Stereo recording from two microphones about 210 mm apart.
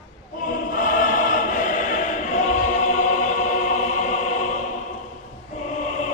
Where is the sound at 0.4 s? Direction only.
40° left (ahead or behind).